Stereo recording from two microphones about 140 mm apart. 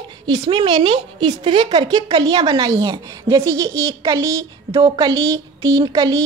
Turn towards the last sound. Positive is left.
turn(degrees=-25)  # may be behind; listen again after turning